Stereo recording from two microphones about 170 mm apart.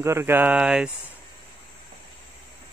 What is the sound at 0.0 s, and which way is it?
Speech, 15° right (ahead or behind).